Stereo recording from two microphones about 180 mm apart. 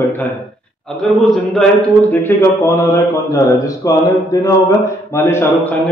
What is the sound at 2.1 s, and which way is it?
A man's voice, 10° left (ahead or behind).